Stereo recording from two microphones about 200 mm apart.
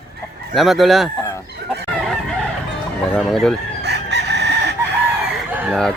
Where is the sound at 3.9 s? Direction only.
55° right (ahead or behind).